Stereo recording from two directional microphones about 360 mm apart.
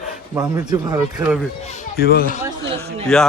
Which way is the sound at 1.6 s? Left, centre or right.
Left.